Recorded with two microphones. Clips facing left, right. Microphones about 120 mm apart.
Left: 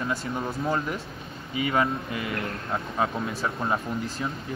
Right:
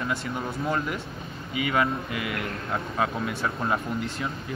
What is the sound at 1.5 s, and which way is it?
Speech, 30° left (ahead or behind).